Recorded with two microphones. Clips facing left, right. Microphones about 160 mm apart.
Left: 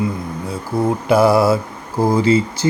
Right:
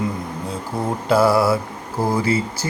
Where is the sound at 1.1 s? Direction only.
15° left (ahead or behind).